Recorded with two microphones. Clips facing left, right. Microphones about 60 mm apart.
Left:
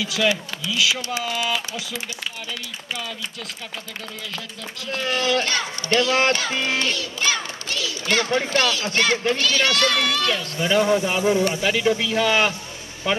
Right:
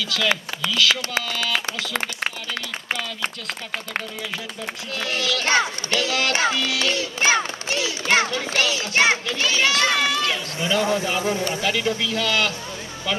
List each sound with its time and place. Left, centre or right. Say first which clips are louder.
0.0 s a man's voice: left 1 dB; centre
1.5 s speech: right 1 dB; right
5.1 s speech: left 4 dB; left
5.4 s a child's voice: right 4 dB; right
5.9 s speech: left 4 dB; left
7.0 s a child's voice: right 4 dB; right
8.5 s speech: left 2 dB; left
8.9 s speech: right 3 dB; centre
10.7 s a man's voice: left 3 dB; left